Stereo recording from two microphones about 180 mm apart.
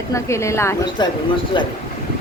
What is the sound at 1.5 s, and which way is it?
Speech, 25° left (ahead or behind).